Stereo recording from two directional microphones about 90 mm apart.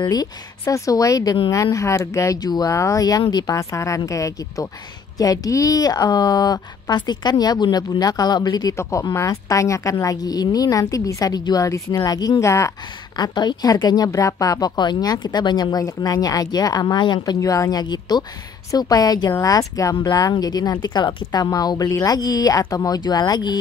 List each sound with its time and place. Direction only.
0.0 s speech: 45° left (ahead or behind)
3.5 s a woman's voice: 35° left (ahead or behind)
9.1 s speech: 35° left (ahead or behind)
13.1 s a woman's voice: 50° left (ahead or behind)
17.4 s a woman's voice: 40° left (ahead or behind)
22.9 s a woman's voice: 50° left (ahead or behind)